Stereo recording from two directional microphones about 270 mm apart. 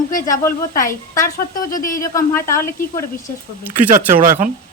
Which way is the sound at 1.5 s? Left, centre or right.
Left.